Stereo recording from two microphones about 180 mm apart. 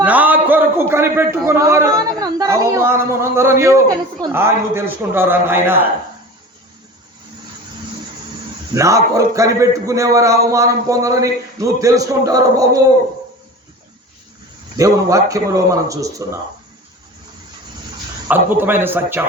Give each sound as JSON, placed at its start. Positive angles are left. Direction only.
{"t": 0.0, "sound": "a man's voice", "side_deg": -10}
{"t": 8.7, "sound": "a man's voice", "side_deg": -15}
{"t": 14.8, "sound": "a man's voice", "side_deg": -15}
{"t": 18.3, "sound": "a man's voice", "side_deg": -10}